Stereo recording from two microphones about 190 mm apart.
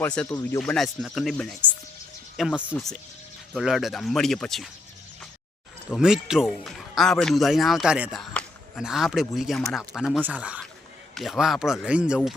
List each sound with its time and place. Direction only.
0.0 s a man's voice: 5° left (ahead or behind)
0.3 s speech: 20° left (ahead or behind)
0.6 s a man's voice: centre (ahead or behind)
5.9 s a man's voice: 5° right (ahead or behind)